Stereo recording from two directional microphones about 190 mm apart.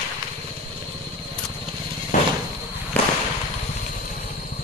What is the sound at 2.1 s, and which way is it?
Vehicle, 40° left (ahead or behind).